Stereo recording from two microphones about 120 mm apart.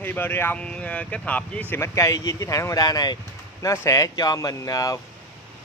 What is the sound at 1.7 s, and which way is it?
Speech, 25° left (ahead or behind).